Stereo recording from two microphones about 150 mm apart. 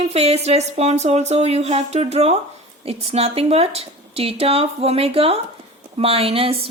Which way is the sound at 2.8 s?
45° right (ahead or behind).